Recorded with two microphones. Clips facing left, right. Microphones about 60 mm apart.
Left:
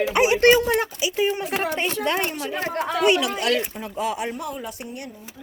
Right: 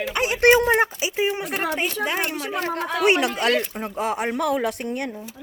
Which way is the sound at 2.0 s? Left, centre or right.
Centre.